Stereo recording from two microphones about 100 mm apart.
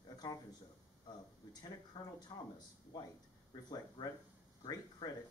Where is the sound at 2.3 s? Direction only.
45° left (ahead or behind).